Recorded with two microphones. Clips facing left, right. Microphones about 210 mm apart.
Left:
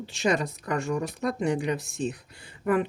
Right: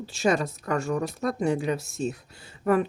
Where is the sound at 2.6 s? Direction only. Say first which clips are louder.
Right 2 dB; 45° right (ahead or behind).